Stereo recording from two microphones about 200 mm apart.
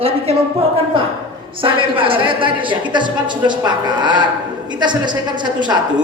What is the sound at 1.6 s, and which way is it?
A woman's voice, 25° right (ahead or behind).